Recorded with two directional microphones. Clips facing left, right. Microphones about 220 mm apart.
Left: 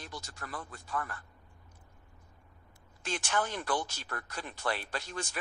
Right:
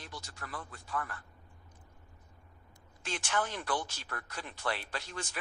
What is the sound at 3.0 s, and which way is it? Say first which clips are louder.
Speech: left 1 dB; 40° left (ahead or behind).